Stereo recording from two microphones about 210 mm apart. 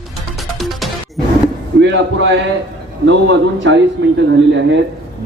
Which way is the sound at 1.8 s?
60° right (ahead or behind).